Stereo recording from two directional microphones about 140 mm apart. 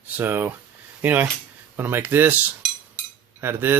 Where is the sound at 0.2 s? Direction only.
15° right (ahead or behind).